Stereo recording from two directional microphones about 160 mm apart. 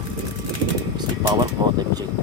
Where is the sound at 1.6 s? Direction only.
25° right (ahead or behind).